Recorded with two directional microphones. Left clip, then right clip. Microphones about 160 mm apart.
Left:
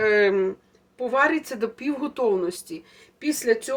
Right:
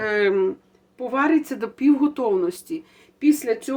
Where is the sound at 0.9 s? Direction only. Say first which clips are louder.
Even; 45° right (ahead or behind).